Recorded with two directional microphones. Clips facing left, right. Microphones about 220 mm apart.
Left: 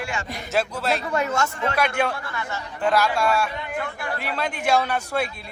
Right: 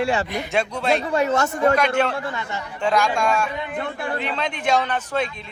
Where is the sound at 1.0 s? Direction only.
35° right (ahead or behind).